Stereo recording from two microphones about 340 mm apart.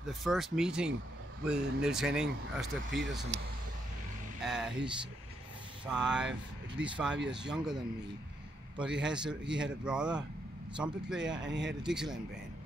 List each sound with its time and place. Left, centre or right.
0.0 s speech: centre
4.4 s vehicle: centre
5.9 s speech: centre
9.0 s speech: centre
11.3 s speech: right
11.8 s speech: centre